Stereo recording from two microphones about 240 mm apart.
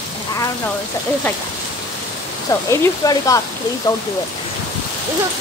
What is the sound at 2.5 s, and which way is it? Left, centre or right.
Speech, centre.